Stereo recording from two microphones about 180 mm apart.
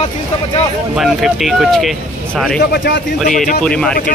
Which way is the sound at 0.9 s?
Centre (ahead or behind).